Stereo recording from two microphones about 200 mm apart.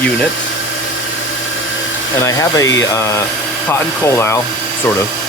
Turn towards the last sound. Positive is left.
turn(degrees=15)  # may be behind; listen again after turning